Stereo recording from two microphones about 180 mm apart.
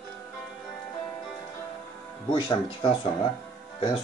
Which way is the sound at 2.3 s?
25° left (ahead or behind).